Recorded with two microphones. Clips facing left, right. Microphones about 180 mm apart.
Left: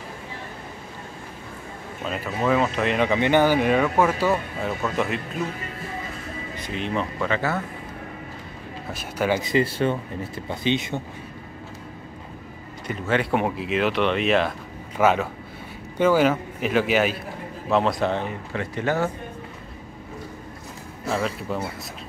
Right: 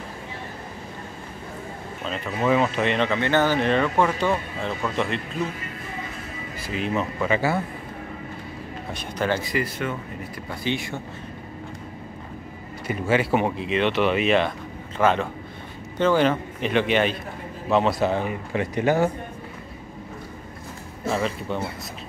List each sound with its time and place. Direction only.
2.0 s speech: 5° left (ahead or behind)
3.1 s speech: 15° left (ahead or behind)
6.7 s speech: 5° right (ahead or behind)
8.9 s speech: 10° left (ahead or behind)
9.4 s speech: 25° left (ahead or behind)
12.8 s speech: 10° right (ahead or behind)
21.1 s speech: centre (ahead or behind)